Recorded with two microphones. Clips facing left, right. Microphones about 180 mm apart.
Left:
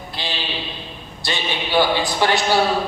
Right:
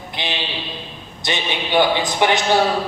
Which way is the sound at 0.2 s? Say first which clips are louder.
Right 2 dB; 20° right (ahead or behind).